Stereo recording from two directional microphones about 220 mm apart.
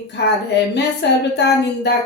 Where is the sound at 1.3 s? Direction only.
50° left (ahead or behind).